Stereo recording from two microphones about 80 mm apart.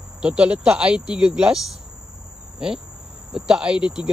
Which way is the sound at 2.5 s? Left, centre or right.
Centre.